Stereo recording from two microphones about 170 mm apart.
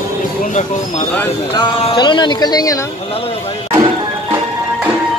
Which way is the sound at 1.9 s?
25° left (ahead or behind).